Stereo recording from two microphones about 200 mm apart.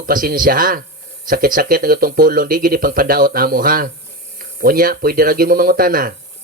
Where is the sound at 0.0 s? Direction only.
45° right (ahead or behind).